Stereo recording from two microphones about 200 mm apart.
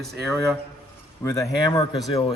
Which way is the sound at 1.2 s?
15° left (ahead or behind).